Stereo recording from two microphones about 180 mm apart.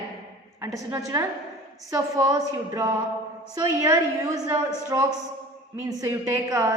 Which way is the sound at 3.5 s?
20° right (ahead or behind).